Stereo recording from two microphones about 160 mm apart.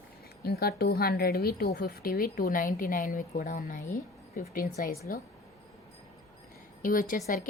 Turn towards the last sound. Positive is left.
turn(degrees=55)  # may be behind; listen again after turning